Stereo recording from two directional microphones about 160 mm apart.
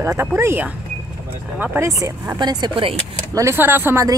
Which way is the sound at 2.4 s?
25° right (ahead or behind).